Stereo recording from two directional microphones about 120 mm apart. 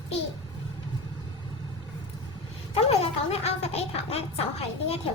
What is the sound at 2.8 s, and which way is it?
Speech, 60° left (ahead or behind).